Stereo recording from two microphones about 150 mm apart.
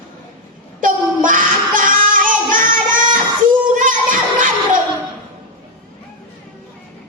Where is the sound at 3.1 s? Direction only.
60° right (ahead or behind).